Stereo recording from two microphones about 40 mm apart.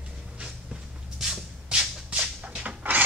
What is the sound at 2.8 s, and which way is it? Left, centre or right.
Filing, right.